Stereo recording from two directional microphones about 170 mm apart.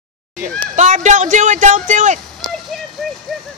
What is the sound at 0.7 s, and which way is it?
Speech, 45° right (ahead or behind).